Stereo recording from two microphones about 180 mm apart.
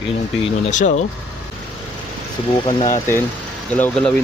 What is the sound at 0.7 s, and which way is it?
Speech, 45° left (ahead or behind).